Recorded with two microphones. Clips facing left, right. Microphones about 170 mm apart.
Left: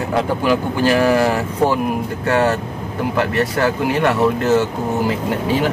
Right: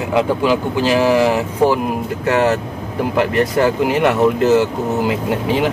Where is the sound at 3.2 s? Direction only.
20° right (ahead or behind).